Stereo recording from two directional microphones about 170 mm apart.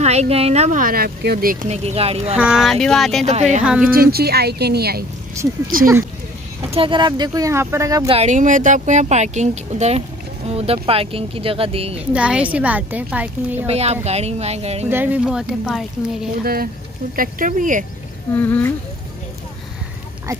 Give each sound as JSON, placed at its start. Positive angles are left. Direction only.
{"t": 0.0, "sound": "speech", "side_deg": -40}
{"t": 1.7, "sound": "speech", "side_deg": -40}
{"t": 2.3, "sound": "speech", "side_deg": -5}
{"t": 3.3, "sound": "speech", "side_deg": -40}
{"t": 3.8, "sound": "speech", "side_deg": -60}
{"t": 6.7, "sound": "speech", "side_deg": -30}
{"t": 8.1, "sound": "speech", "side_deg": -40}
{"t": 12.0, "sound": "a woman's voice", "side_deg": -5}
{"t": 13.7, "sound": "speech", "side_deg": -40}
{"t": 14.9, "sound": "speech", "side_deg": -10}
{"t": 17.1, "sound": "speech", "side_deg": -55}
{"t": 18.3, "sound": "speech", "side_deg": 10}